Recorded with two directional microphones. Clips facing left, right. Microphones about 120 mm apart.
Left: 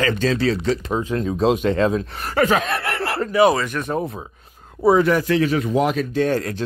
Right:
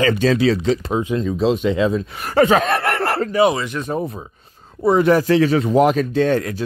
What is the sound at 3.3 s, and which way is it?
Speech, 25° right (ahead or behind).